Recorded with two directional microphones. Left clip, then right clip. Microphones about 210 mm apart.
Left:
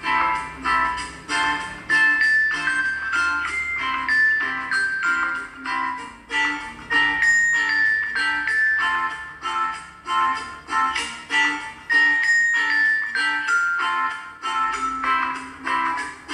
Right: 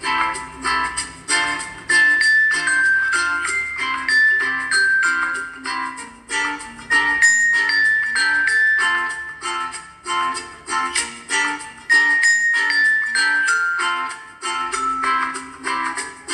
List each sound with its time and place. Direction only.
0.0 s music: 30° right (ahead or behind)